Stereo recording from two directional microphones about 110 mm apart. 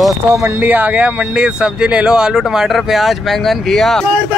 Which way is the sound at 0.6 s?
15° right (ahead or behind).